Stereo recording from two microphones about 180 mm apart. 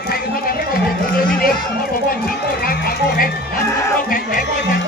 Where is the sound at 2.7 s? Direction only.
55° left (ahead or behind).